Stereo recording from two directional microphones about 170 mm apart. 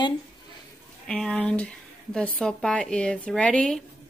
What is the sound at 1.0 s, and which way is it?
A woman's voice, 5° left (ahead or behind).